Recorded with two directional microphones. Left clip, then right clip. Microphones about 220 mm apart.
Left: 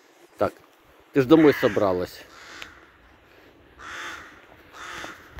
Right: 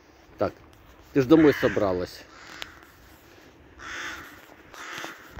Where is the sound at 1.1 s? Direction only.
Centre (ahead or behind).